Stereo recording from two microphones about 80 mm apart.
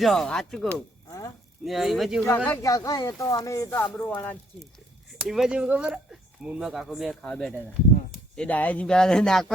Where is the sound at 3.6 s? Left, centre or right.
Left.